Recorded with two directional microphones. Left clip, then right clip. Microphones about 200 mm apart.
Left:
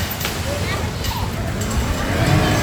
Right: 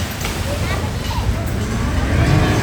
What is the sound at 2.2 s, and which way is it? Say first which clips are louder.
Vehicle: even; 55° left (ahead or behind).